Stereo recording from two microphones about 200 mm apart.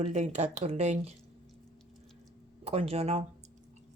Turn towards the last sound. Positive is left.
turn(degrees=-30)  # may be behind; listen again after turning